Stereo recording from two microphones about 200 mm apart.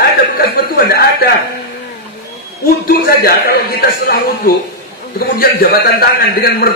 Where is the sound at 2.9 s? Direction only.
50° left (ahead or behind).